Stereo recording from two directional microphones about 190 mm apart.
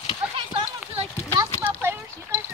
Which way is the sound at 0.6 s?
20° right (ahead or behind).